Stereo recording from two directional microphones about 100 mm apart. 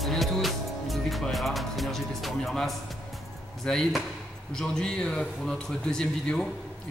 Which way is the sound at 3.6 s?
5° left (ahead or behind).